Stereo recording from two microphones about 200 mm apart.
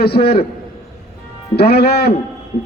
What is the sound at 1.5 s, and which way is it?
Speech, 55° left (ahead or behind).